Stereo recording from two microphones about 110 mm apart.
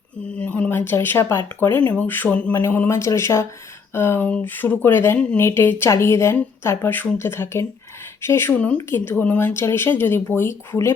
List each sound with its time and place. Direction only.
0.3 s speech: 15° left (ahead or behind)